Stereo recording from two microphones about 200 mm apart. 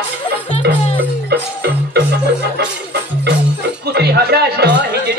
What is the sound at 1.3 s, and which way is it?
Music, 55° right (ahead or behind).